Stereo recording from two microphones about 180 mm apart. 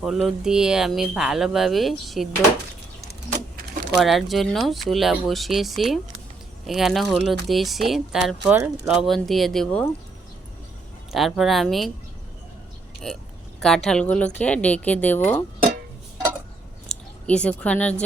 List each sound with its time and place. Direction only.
0.0 s speech: centre (ahead or behind)
3.9 s speech: centre (ahead or behind)
11.1 s speech: centre (ahead or behind)
13.6 s speech: 5° left (ahead or behind)
16.9 s a sound: 40° left (ahead or behind)
17.2 s speech: 5° left (ahead or behind)